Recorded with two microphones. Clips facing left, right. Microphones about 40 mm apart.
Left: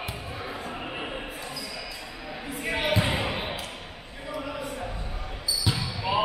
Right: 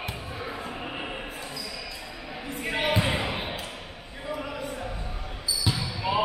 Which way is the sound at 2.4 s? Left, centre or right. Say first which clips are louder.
Right 1 dB; centre.